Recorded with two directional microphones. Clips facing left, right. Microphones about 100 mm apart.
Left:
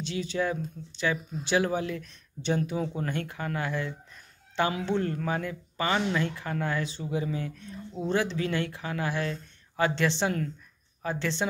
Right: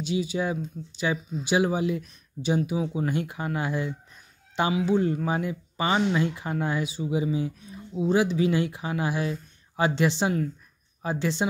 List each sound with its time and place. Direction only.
0.0 s speech: 10° right (ahead or behind)